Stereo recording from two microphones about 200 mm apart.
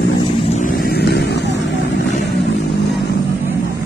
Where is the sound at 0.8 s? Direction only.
55° left (ahead or behind).